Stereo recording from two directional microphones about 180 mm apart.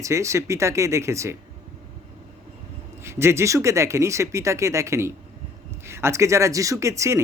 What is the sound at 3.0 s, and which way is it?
A man's voice, 15° right (ahead or behind).